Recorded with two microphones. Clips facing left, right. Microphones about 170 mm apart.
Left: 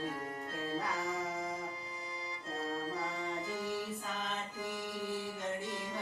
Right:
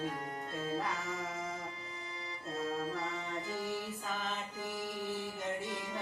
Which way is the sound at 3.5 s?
Centre (ahead or behind).